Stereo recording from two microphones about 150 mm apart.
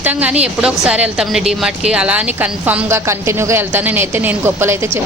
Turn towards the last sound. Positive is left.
turn(degrees=-15)  # may be behind; listen again after turning